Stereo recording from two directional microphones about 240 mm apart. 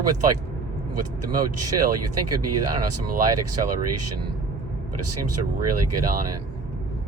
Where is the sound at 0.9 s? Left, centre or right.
Right.